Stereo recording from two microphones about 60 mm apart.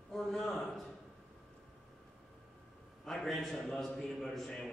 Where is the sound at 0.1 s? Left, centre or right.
Centre.